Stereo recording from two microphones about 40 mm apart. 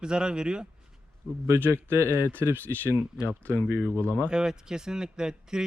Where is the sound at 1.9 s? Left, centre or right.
Right.